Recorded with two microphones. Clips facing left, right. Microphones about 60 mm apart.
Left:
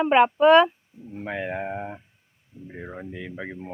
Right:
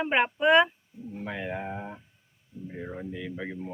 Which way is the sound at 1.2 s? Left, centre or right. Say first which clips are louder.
Left 5 dB; left.